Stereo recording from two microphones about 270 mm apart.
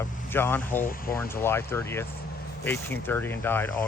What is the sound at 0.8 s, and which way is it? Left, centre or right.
Speech, left.